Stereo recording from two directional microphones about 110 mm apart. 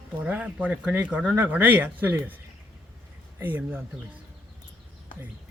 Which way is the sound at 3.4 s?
15° right (ahead or behind).